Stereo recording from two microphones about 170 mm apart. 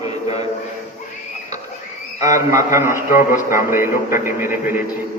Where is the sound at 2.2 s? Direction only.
20° right (ahead or behind).